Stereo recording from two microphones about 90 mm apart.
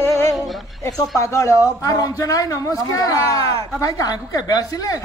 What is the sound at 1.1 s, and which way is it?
A man's voice, 35° left (ahead or behind).